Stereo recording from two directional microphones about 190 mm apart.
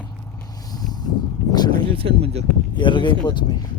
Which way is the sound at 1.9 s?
30° right (ahead or behind).